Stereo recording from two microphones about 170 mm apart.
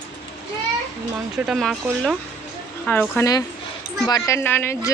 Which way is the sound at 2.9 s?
10° left (ahead or behind).